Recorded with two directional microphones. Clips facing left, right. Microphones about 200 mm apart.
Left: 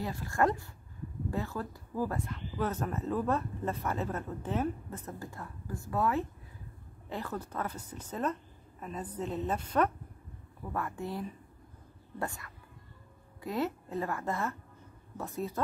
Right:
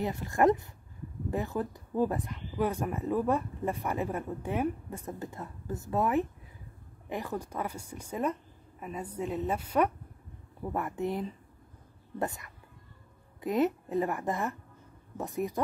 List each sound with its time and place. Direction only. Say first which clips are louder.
0.0 s a woman's voice: right 4 dB; 20° right (ahead or behind)
10.6 s a woman's voice: right 4 dB; 20° right (ahead or behind)